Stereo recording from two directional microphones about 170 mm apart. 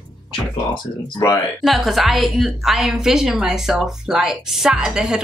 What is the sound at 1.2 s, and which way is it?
Speech, 20° left (ahead or behind).